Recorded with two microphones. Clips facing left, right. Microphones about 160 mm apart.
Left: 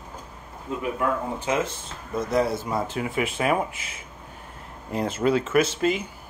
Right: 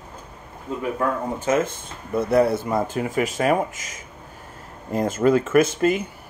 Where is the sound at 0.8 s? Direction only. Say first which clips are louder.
Right 2 dB; 40° right (ahead or behind).